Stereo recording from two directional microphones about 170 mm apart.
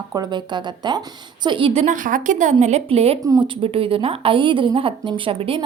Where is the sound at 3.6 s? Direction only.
30° right (ahead or behind).